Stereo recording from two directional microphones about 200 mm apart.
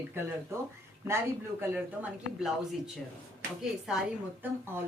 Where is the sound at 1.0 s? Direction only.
15° right (ahead or behind).